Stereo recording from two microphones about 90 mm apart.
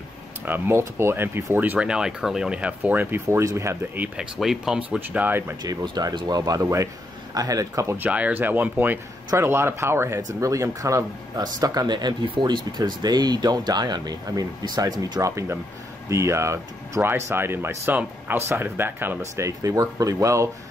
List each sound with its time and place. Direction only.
0.5 s speech: 25° right (ahead or behind)
4.2 s speech: 5° right (ahead or behind)
5.0 s speech: 20° right (ahead or behind)
5.6 s speech: 45° right (ahead or behind)
8.0 s speech: 20° right (ahead or behind)
19.4 s speech: 40° right (ahead or behind)